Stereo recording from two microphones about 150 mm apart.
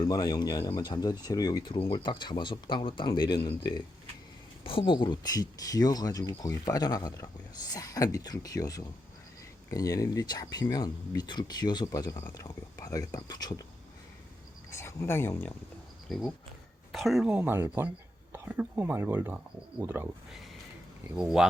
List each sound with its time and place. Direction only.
0.0 s speech: 25° left (ahead or behind)
14.7 s speech: 20° left (ahead or behind)
16.0 s speech: centre (ahead or behind); by 20.1 s 15° right (ahead or behind)
21.2 s speech: 5° right (ahead or behind)